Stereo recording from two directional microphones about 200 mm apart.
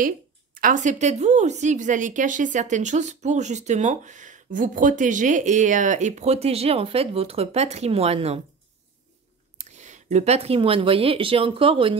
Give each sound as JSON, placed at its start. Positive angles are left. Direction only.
{"t": 0.6, "sound": "a woman's voice", "side_deg": -40}
{"t": 9.6, "sound": "speech", "side_deg": -35}